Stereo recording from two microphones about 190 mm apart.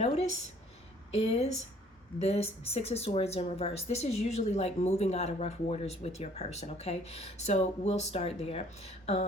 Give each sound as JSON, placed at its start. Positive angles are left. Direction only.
{"t": 1.1, "sound": "speech", "side_deg": 35}